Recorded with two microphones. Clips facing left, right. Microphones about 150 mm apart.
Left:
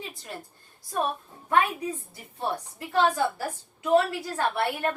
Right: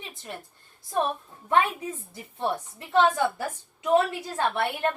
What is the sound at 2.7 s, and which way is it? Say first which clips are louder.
A woman's voice: right 2 dB; 20° right (ahead or behind).